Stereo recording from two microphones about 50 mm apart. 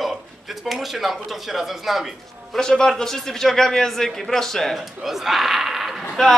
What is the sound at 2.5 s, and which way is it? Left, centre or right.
A man's voice, centre.